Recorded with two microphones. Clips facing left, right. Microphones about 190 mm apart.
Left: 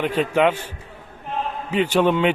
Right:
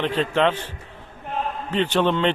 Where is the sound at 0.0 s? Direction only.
10° left (ahead or behind).